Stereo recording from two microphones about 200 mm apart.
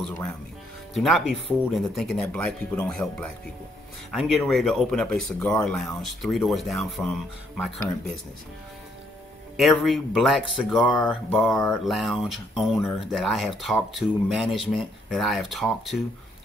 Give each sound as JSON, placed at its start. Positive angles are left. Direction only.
{"t": 0.9, "sound": "speech", "side_deg": 0}
{"t": 9.6, "sound": "speech", "side_deg": 0}